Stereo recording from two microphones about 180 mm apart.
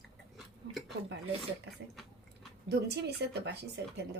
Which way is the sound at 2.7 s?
65° right (ahead or behind).